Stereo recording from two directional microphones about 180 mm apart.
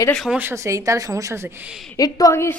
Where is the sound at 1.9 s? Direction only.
20° left (ahead or behind).